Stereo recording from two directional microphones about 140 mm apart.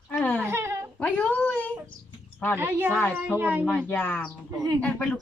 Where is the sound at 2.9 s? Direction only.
10° left (ahead or behind).